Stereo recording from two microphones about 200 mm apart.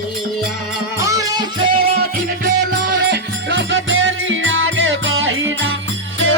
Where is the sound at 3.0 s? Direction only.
60° right (ahead or behind).